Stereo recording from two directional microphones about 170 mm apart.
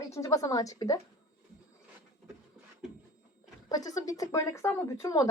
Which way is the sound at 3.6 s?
20° left (ahead or behind).